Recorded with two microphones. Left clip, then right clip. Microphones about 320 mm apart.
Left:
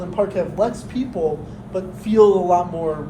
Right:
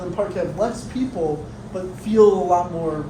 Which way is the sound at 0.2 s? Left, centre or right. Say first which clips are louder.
Left 3 dB; left.